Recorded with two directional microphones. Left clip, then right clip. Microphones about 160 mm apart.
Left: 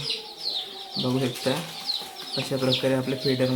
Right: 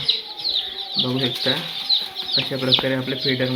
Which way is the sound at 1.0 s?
5° left (ahead or behind).